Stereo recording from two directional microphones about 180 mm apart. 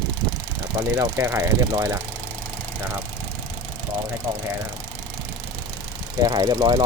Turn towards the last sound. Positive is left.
turn(degrees=-25)  # may be behind; listen again after turning